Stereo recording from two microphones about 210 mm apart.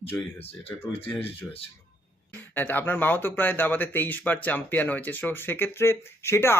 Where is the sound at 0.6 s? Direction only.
25° left (ahead or behind).